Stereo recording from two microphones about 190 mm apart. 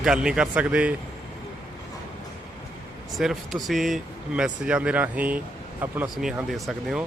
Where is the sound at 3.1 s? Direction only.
Centre (ahead or behind).